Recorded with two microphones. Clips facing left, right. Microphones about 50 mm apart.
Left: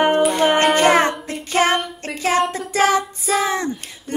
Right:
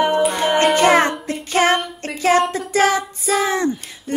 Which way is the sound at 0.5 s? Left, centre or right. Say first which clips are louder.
Even; centre.